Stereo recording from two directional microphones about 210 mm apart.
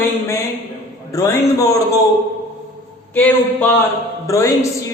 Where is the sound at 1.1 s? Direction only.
15° left (ahead or behind).